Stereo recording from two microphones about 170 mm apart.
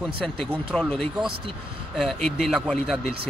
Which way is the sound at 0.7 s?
5° left (ahead or behind).